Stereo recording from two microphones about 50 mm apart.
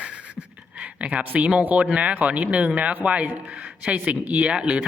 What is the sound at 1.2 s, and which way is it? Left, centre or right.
Speech, right.